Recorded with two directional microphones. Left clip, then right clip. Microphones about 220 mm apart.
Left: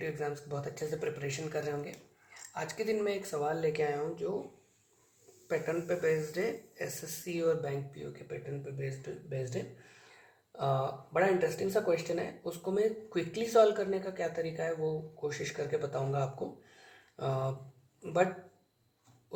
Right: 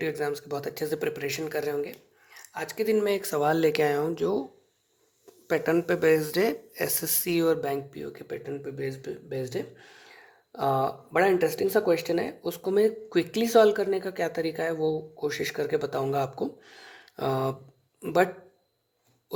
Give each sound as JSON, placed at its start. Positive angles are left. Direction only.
{"t": 0.0, "sound": "speech", "side_deg": -50}
{"t": 5.5, "sound": "speech", "side_deg": -55}
{"t": 10.6, "sound": "speech", "side_deg": -55}